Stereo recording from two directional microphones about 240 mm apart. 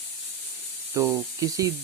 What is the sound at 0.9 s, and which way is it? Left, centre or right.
Speech, centre.